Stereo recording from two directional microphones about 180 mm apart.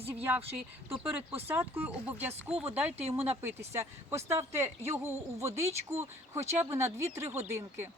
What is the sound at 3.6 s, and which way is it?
Speech, 15° right (ahead or behind).